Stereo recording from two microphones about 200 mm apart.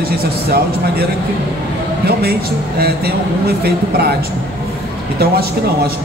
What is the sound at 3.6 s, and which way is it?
Speech, 50° right (ahead or behind).